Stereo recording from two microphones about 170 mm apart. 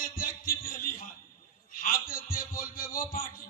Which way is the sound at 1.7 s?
55° left (ahead or behind).